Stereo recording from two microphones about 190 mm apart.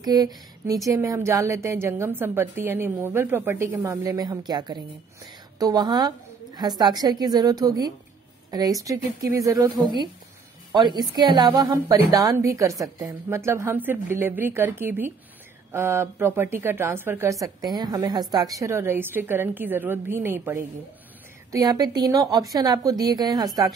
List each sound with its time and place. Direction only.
0.0 s a woman's voice: 20° right (ahead or behind)